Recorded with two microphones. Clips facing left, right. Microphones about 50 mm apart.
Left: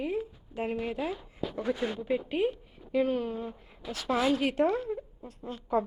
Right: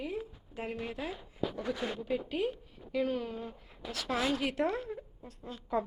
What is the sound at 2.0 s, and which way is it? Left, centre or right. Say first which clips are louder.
A woman's voice: left 5 dB; left.